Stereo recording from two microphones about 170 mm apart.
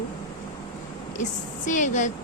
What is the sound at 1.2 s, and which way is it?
Speech, 45° left (ahead or behind).